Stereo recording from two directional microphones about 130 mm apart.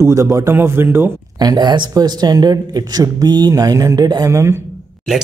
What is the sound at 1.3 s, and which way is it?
Speech, 30° right (ahead or behind).